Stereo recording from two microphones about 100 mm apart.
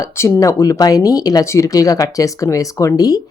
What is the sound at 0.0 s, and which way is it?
Speech, 30° left (ahead or behind).